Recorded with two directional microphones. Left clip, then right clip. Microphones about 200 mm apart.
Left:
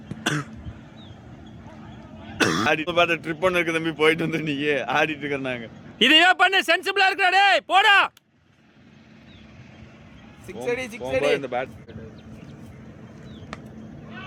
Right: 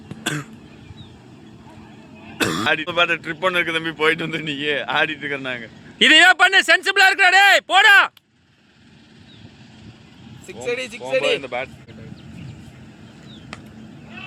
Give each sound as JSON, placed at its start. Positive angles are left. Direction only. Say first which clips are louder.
{"t": 0.2, "sound": "cough", "louder": "even", "side_deg": 20}
{"t": 2.4, "sound": "throat clearing", "louder": "even", "side_deg": 20}
{"t": 2.6, "sound": "a man's voice", "louder": "right 4 dB", "side_deg": 35}
{"t": 6.0, "sound": "a man's voice", "louder": "right 4 dB", "side_deg": 0}
{"t": 10.4, "sound": "speech", "louder": "right 2 dB", "side_deg": 55}